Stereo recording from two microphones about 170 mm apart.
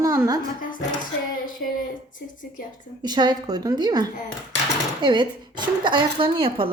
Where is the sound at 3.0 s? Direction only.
25° right (ahead or behind).